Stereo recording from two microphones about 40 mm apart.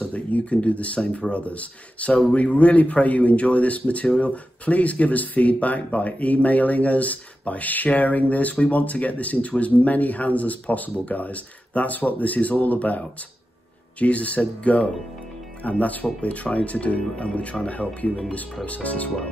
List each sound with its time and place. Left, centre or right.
0.0 s speech: left